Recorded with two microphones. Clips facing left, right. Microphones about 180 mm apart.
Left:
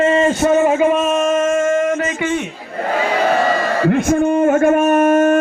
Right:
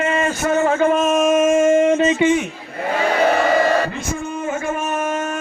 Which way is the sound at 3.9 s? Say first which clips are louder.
Left 12 dB; 60° left (ahead or behind).